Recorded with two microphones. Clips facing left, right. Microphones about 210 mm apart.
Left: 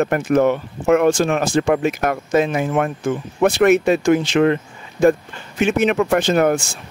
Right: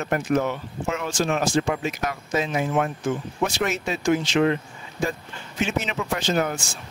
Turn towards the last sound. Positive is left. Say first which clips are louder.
# left 8 dB
turn(degrees=60)  # may be behind; listen again after turning